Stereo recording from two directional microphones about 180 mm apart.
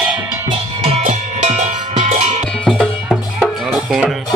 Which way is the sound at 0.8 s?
35° right (ahead or behind).